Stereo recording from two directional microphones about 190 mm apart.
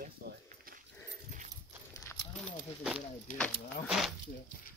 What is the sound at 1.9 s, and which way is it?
Horse, 15° left (ahead or behind).